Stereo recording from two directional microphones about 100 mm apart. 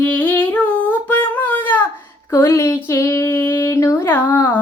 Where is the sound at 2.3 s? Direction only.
30° left (ahead or behind).